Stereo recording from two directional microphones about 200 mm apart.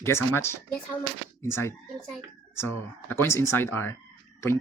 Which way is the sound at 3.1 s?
10° left (ahead or behind).